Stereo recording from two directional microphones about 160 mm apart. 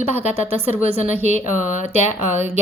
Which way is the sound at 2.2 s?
15° right (ahead or behind).